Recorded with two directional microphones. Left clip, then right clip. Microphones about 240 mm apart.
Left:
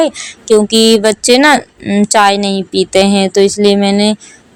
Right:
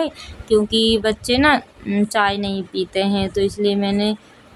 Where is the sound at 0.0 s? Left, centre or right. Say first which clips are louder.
Left 11 dB; left.